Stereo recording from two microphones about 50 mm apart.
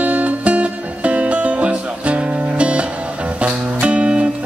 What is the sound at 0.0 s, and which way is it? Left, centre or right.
Music, right.